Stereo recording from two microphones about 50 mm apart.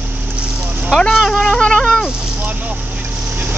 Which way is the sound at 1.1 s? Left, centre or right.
Centre.